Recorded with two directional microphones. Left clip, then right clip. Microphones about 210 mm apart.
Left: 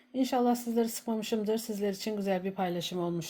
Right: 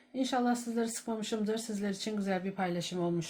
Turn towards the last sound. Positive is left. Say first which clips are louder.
# left 1 dB
turn(degrees=30)  # may be behind; listen again after turning